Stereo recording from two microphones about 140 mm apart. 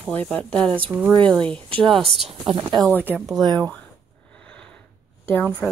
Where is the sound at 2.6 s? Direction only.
30° right (ahead or behind).